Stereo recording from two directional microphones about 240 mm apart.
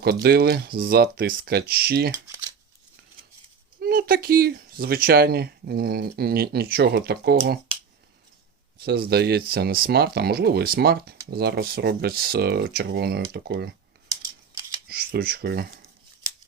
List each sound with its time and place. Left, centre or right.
0.0 s speech: right
3.8 s speech: right
8.8 s speech: right
14.1 s scissors: centre
14.8 s speech: right